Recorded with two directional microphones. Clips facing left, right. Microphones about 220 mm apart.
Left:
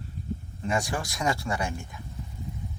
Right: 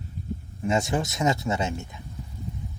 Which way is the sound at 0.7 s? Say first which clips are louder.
Right 4 dB; 25° right (ahead or behind).